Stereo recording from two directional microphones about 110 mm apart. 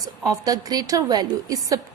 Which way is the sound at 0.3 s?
35° right (ahead or behind).